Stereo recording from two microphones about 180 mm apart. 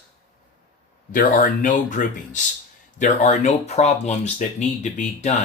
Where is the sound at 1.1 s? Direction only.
45° left (ahead or behind).